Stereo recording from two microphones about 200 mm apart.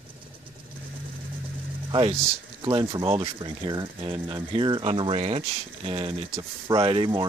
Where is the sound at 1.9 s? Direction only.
25° right (ahead or behind).